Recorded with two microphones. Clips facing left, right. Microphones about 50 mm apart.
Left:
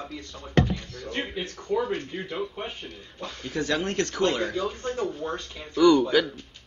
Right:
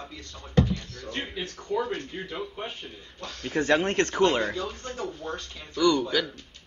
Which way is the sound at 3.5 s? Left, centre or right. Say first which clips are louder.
Right 4 dB; right.